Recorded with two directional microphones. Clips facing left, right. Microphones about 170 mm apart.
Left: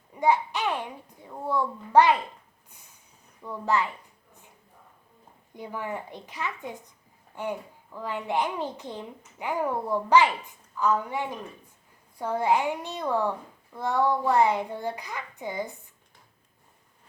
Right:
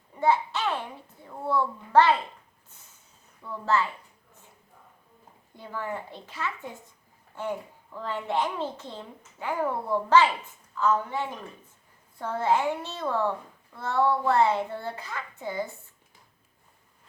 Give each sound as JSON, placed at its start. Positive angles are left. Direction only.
{"t": 0.2, "sound": "a woman's voice", "side_deg": 15}
{"t": 3.4, "sound": "a woman's voice", "side_deg": 15}
{"t": 5.5, "sound": "a woman's voice", "side_deg": 15}